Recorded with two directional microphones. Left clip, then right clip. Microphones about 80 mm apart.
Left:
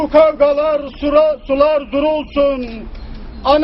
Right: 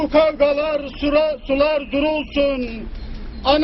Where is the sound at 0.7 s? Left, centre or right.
Centre.